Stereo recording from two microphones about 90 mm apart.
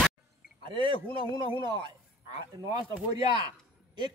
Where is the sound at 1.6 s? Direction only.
55° right (ahead or behind).